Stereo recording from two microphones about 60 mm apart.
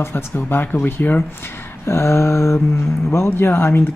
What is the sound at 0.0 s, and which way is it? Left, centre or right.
Speech, left.